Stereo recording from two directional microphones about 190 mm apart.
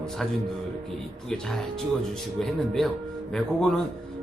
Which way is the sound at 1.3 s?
5° left (ahead or behind).